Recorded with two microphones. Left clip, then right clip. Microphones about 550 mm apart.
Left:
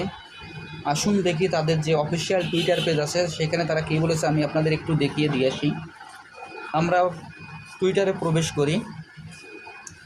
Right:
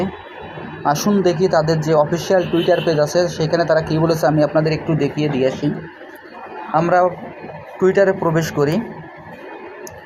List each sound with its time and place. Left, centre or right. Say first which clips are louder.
0.9 s speech: right 7 dB; left
6.7 s speech: right 7 dB; left